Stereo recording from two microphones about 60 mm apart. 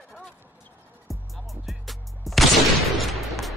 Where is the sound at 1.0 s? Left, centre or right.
Centre.